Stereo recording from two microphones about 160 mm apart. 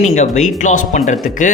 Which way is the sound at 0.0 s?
45° left (ahead or behind).